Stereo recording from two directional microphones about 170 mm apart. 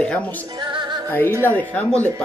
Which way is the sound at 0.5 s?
30° right (ahead or behind).